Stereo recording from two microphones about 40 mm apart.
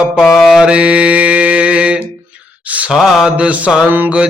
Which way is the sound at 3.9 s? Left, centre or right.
Right.